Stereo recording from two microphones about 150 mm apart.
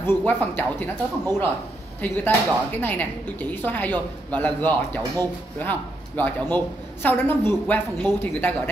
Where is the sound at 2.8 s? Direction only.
10° left (ahead or behind).